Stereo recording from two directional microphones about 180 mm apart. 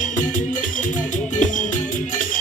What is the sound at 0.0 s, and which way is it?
Music, 45° left (ahead or behind).